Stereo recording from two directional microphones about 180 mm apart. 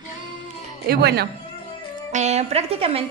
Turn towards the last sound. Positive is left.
turn(degrees=-35)  # may be behind; listen again after turning